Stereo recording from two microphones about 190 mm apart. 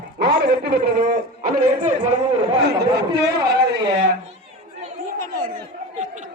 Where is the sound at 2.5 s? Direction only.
60° right (ahead or behind).